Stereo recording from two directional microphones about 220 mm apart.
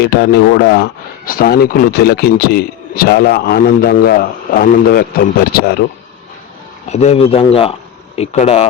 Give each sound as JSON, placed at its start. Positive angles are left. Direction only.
{"t": 0.0, "sound": "speech", "side_deg": 50}
{"t": 6.9, "sound": "speech", "side_deg": 30}